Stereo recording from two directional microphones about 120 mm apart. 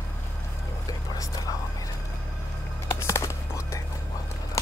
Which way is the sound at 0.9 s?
30° left (ahead or behind).